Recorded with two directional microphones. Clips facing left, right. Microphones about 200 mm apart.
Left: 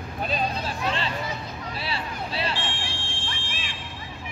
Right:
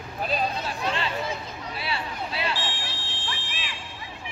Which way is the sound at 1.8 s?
35° left (ahead or behind).